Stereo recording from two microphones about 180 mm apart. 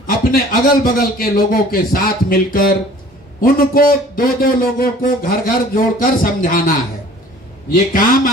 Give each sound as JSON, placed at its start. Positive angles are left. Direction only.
{"t": 0.0, "sound": "a man's voice", "side_deg": 50}
{"t": 7.7, "sound": "a man's voice", "side_deg": 55}